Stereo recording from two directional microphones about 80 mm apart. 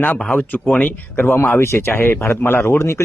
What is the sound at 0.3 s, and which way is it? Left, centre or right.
Speech, left.